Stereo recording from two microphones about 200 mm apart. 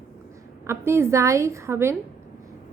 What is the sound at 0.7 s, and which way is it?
A woman's voice, 15° right (ahead or behind).